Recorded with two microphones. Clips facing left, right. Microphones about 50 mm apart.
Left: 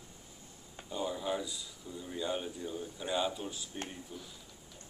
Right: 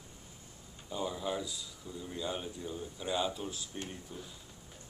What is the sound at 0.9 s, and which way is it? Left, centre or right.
Speech, centre.